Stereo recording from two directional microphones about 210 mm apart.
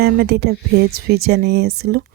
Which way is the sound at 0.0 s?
50° right (ahead or behind).